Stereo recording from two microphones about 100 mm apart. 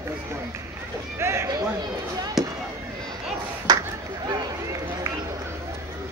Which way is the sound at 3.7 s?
40° right (ahead or behind).